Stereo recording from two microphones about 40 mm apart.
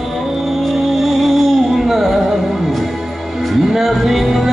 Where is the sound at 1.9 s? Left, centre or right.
Centre.